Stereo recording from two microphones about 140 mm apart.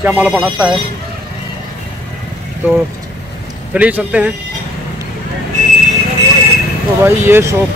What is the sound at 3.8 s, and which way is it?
Speech, 10° right (ahead or behind).